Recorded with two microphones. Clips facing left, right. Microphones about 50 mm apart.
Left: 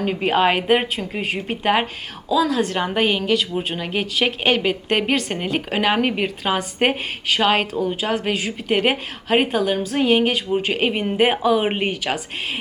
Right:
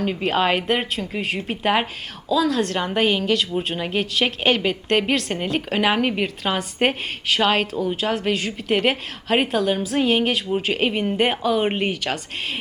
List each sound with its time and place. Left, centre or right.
0.0 s a woman's voice: centre